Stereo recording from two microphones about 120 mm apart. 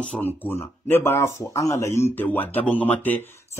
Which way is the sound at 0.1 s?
15° left (ahead or behind).